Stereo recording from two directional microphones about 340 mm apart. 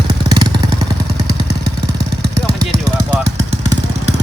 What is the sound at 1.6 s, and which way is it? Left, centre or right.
Vehicle, right.